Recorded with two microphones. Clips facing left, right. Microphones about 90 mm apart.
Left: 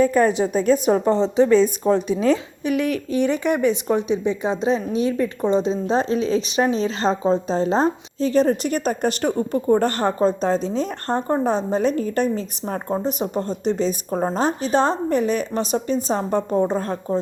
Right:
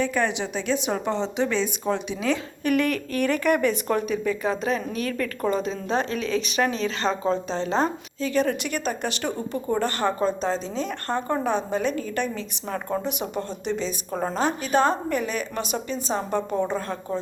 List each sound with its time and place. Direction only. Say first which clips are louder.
0.0 s speech: left 8 dB; 40° left (ahead or behind)
2.6 s speech: left 1 dB; 15° left (ahead or behind); by 17.2 s 40° left (ahead or behind)